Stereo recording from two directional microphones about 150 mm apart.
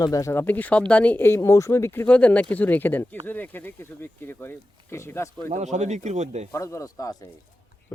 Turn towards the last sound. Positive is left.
turn(degrees=20)  # may be behind; listen again after turning